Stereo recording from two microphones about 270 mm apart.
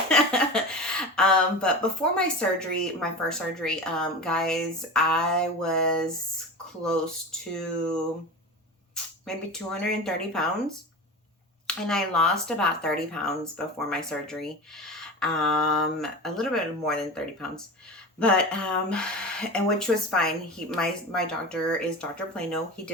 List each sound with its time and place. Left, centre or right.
0.1 s speech: centre
9.2 s speech: centre
11.6 s speech: centre